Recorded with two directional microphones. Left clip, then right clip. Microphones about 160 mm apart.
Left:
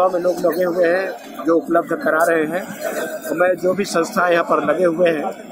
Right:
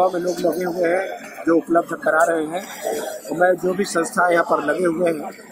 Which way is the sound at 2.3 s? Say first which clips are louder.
Left 4 dB; 30° left (ahead or behind).